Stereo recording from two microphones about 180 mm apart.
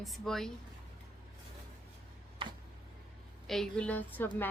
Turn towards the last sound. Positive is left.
turn(degrees=10)  # may be behind; listen again after turning